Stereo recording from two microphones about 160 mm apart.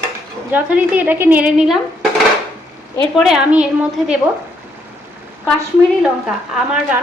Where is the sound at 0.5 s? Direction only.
10° right (ahead or behind).